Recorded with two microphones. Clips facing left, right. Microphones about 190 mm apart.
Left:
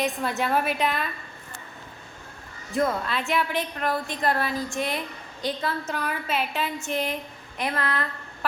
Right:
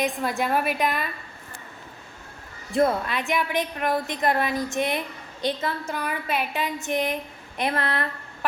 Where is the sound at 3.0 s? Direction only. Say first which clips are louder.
Even; 15° right (ahead or behind).